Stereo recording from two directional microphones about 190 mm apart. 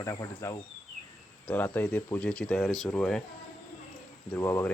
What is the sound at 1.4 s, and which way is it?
Speech, 10° left (ahead or behind).